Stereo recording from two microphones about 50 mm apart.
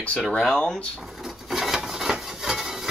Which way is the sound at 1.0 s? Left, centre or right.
Centre.